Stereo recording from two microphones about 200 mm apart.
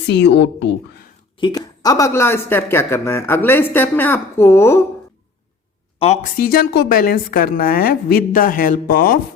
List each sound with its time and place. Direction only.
0.1 s a woman's voice: 60° left (ahead or behind)
1.4 s speech: 20° left (ahead or behind)
6.0 s speech: 30° left (ahead or behind)
6.3 s a woman's voice: 45° left (ahead or behind)